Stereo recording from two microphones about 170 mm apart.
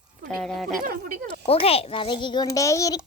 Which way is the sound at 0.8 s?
60° right (ahead or behind).